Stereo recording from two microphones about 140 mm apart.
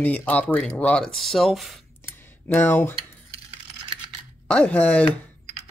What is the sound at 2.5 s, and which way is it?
Speech, 15° left (ahead or behind).